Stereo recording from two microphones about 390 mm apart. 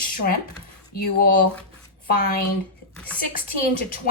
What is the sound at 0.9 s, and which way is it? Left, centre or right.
Speech, left.